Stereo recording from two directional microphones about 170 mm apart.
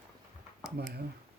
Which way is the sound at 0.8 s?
70° right (ahead or behind).